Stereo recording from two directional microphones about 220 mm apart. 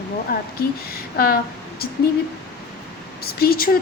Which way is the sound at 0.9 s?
45° left (ahead or behind).